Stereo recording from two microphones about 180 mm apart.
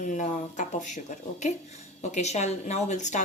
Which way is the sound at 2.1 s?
40° left (ahead or behind).